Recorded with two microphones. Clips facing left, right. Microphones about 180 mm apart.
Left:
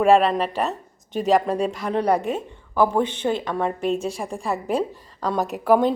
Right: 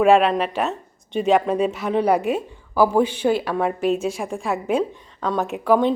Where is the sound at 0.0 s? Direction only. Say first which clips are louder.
Right 1 dB; centre (ahead or behind).